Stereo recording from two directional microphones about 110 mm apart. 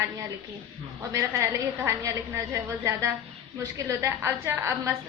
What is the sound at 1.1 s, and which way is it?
A woman's voice, 30° right (ahead or behind).